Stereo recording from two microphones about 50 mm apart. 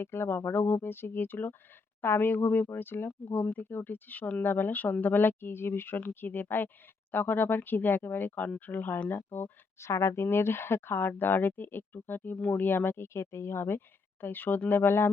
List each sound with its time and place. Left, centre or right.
0.0 s speech: left
3.3 s speech: left
3.6 s speech: left
9.7 s speech: left
13.1 s speech: left